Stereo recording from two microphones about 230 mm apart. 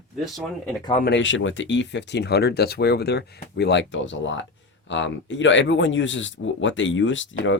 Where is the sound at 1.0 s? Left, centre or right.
Left.